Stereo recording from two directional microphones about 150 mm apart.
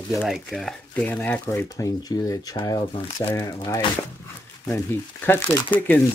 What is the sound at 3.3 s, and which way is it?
Speech, 25° left (ahead or behind).